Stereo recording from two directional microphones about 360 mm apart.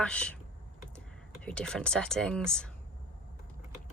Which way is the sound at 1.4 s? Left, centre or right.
Centre.